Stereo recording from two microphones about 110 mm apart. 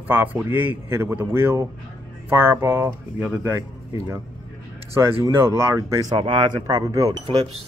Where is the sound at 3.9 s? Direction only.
30° right (ahead or behind).